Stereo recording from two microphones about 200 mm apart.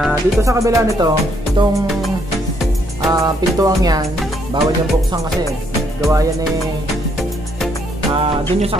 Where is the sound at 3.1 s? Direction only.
20° right (ahead or behind).